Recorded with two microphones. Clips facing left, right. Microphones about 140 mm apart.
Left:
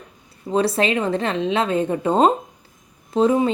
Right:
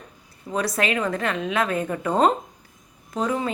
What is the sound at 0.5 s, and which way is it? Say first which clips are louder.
Speech: left 5 dB; 30° left (ahead or behind).